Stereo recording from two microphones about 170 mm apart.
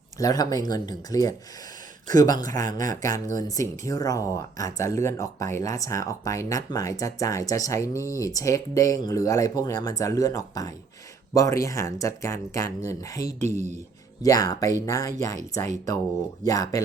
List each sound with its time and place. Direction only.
0.2 s speech: 20° left (ahead or behind)
13.4 s speech: 45° right (ahead or behind)
14.2 s speech: 20° left (ahead or behind)
16.4 s speech: 20° left (ahead or behind)